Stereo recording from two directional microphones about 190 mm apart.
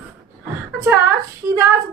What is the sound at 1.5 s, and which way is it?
Speech, 15° right (ahead or behind).